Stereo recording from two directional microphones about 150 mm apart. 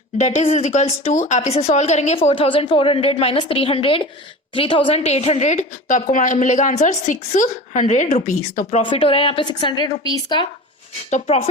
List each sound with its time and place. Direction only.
0.2 s a woman's voice: 45° left (ahead or behind)
8.8 s a woman's voice: 35° left (ahead or behind)
11.1 s a woman's voice: 45° left (ahead or behind)